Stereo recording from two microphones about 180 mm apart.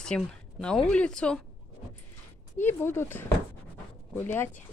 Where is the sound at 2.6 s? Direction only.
10° left (ahead or behind).